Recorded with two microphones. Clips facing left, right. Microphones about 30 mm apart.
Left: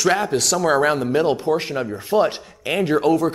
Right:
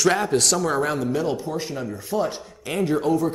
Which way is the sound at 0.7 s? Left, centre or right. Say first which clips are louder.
Left 5 dB; left.